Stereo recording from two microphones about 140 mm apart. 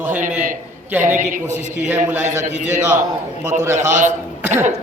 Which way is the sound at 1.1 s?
60° right (ahead or behind).